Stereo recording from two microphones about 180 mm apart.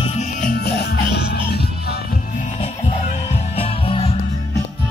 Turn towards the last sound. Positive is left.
turn(degrees=30)  # may be behind; listen again after turning